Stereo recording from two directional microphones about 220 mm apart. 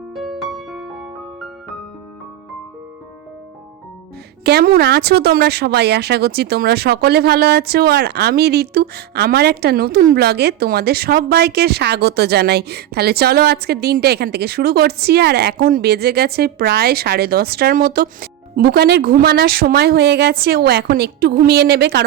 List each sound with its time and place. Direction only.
0.1 s music: centre (ahead or behind)
4.4 s a woman's voice: 45° right (ahead or behind)